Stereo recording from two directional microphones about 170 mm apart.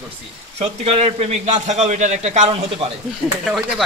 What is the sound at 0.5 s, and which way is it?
A man's voice, 35° right (ahead or behind).